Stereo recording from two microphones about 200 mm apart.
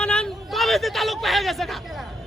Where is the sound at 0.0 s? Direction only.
5° left (ahead or behind).